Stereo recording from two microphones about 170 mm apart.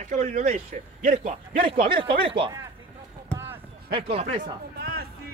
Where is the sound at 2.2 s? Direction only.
30° right (ahead or behind).